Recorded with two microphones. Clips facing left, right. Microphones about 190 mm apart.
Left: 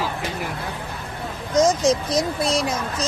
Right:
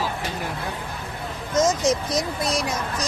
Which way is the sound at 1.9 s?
20° left (ahead or behind).